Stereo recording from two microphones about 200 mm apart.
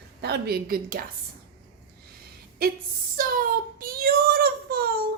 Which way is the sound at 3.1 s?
45° right (ahead or behind).